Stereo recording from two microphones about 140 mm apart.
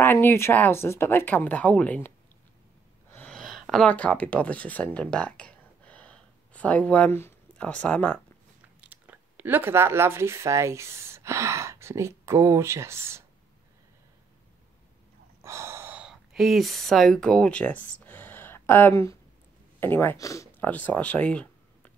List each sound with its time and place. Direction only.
0.0 s speech: 15° left (ahead or behind)
3.1 s a sound: 10° left (ahead or behind)
8.8 s speech: 10° right (ahead or behind)
15.4 s speech: 20° right (ahead or behind); by 17.8 s 10° left (ahead or behind)
17.9 s a sound: 10° left (ahead or behind)
19.8 s speech: 15° left (ahead or behind)
20.6 s speech: 10° left (ahead or behind)